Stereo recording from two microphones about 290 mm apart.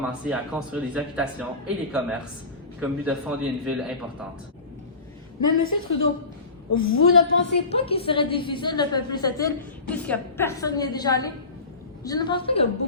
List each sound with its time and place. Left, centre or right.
0.0 s speech: centre
5.5 s a woman's voice: left
7.7 s a woman's voice: centre